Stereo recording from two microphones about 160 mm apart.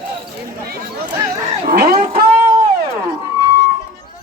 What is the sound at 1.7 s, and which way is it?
Speech, 70° right (ahead or behind).